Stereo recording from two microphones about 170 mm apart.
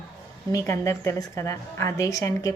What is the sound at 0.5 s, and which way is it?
A woman's voice, 15° left (ahead or behind).